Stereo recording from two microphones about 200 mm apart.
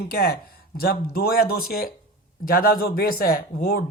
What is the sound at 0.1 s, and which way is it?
Speech, 50° left (ahead or behind).